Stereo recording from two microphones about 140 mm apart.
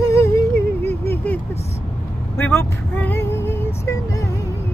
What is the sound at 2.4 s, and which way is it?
Female singing, 15° left (ahead or behind).